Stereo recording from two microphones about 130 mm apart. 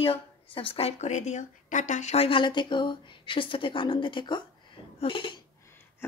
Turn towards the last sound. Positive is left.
turn(degrees=40)  # may be behind; listen again after turning